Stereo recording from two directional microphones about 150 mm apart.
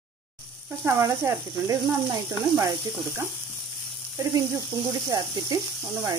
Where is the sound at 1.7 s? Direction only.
20° right (ahead or behind).